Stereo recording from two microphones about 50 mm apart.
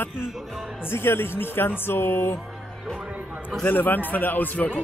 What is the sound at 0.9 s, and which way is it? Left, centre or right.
Speech, left.